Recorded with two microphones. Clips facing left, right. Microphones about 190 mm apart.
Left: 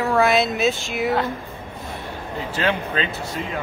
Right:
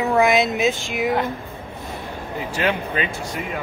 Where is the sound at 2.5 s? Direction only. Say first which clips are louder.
Even; 15° right (ahead or behind).